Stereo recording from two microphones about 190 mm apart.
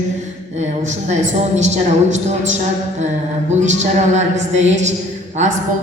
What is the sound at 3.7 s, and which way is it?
A woman's voice, 35° right (ahead or behind).